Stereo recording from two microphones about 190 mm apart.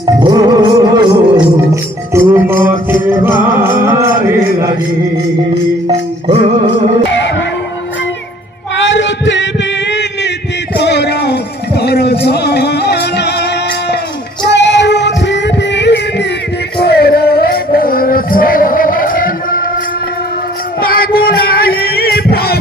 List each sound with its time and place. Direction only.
0.0 s music: 20° right (ahead or behind)
8.7 s male singing: 75° left (ahead or behind)
10.8 s music: 65° left (ahead or behind); by 19.6 s 45° left (ahead or behind)
20.8 s music: 50° left (ahead or behind)